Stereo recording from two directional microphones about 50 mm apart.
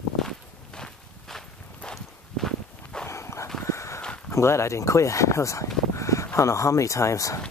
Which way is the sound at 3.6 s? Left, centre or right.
Left.